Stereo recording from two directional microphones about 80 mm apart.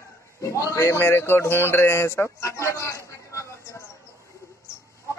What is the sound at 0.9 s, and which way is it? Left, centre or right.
Speech, left.